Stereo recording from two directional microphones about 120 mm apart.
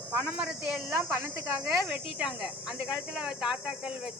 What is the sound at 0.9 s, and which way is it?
Speech, 20° right (ahead or behind).